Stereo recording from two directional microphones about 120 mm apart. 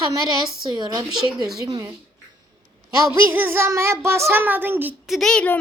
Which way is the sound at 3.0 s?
20° right (ahead or behind).